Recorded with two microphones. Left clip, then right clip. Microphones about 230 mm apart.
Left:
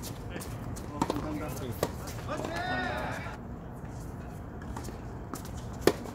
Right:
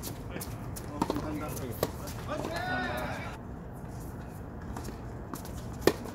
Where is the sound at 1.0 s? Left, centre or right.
Left.